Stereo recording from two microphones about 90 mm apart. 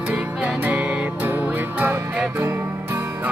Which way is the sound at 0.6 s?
15° right (ahead or behind).